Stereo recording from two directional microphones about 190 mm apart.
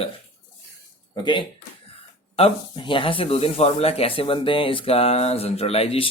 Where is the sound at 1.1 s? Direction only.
25° left (ahead or behind).